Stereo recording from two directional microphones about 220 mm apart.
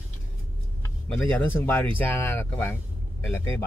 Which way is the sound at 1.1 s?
5° left (ahead or behind).